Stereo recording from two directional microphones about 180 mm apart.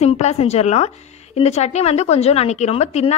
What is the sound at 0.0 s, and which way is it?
A woman's voice, 35° left (ahead or behind).